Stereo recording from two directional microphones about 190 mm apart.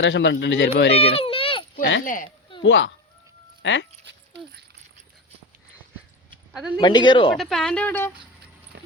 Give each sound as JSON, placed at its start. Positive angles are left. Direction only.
{"t": 0.0, "sound": "speech", "side_deg": 75}
{"t": 0.9, "sound": "baby cry", "side_deg": 30}
{"t": 1.7, "sound": "speech", "side_deg": 70}
{"t": 2.0, "sound": "speech", "side_deg": 45}
{"t": 2.6, "sound": "speech", "side_deg": 75}
{"t": 6.5, "sound": "speech", "side_deg": 0}
{"t": 6.7, "sound": "speech", "side_deg": 25}
{"t": 7.3, "sound": "speech", "side_deg": 0}
{"t": 8.7, "sound": "a sound", "side_deg": -60}